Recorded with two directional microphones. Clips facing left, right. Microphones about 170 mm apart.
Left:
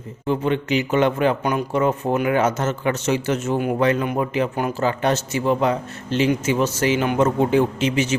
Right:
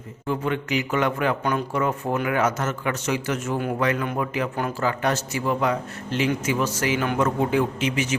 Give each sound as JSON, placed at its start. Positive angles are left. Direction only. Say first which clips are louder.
{"t": 0.3, "sound": "a man's voice", "louder": "left 4 dB", "side_deg": 25}